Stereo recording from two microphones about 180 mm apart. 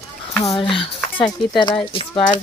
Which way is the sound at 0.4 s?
30° left (ahead or behind).